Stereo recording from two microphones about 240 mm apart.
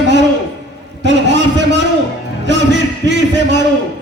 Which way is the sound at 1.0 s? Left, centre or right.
Right.